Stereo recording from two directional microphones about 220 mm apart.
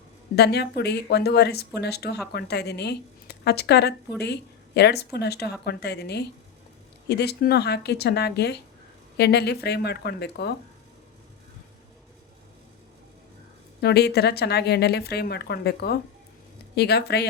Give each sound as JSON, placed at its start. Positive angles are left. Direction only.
{"t": 0.3, "sound": "a woman's voice", "side_deg": 50}
{"t": 13.8, "sound": "a woman's voice", "side_deg": 45}